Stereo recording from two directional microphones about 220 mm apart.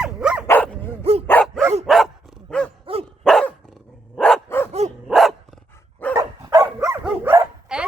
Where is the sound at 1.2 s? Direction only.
5° left (ahead or behind).